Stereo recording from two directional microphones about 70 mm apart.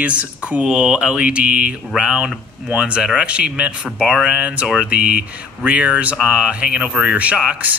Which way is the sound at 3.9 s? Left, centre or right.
Centre.